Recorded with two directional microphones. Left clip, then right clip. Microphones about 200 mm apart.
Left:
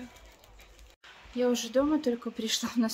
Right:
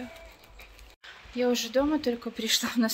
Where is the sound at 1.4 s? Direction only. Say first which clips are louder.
Right 1 dB; 15° left (ahead or behind).